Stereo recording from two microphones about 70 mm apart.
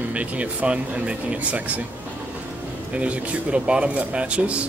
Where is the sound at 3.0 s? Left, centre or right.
Centre.